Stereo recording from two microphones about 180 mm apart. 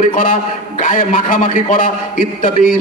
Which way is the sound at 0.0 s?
45° left (ahead or behind).